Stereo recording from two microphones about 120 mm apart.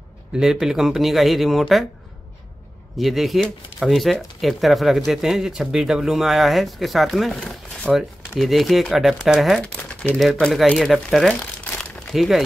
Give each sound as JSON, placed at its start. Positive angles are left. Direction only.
{"t": 0.4, "sound": "speech", "side_deg": -5}
{"t": 3.0, "sound": "speech", "side_deg": 0}
{"t": 9.8, "sound": "speech", "side_deg": 15}
{"t": 10.4, "sound": "speech", "side_deg": 0}